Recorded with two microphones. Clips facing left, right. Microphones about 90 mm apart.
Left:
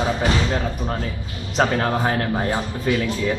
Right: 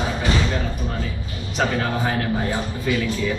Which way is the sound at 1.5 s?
40° left (ahead or behind).